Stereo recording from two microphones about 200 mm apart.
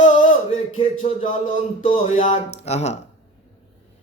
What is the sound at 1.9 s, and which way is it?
Speech, 35° left (ahead or behind).